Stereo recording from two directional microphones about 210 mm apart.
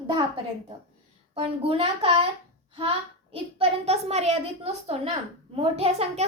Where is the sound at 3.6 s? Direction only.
30° right (ahead or behind).